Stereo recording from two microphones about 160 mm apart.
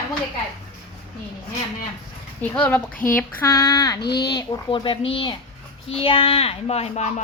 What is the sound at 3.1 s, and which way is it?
Child singing, 15° left (ahead or behind).